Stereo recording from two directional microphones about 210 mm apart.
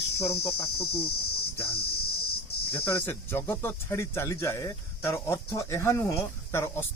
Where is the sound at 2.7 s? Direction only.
10° left (ahead or behind).